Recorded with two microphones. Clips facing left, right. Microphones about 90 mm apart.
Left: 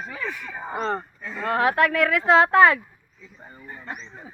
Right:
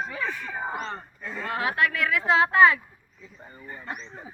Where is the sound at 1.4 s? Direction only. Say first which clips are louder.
Left 6 dB; 50° left (ahead or behind).